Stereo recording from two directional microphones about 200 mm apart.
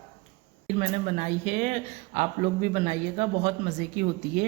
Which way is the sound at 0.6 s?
35° right (ahead or behind).